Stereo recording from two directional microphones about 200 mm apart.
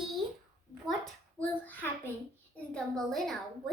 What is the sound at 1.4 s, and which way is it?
A child's voice, 10° left (ahead or behind).